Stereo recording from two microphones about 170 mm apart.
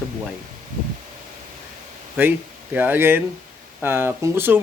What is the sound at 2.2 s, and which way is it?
Speech, 10° right (ahead or behind).